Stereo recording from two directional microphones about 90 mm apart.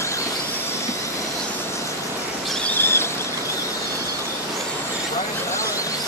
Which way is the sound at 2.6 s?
25° left (ahead or behind).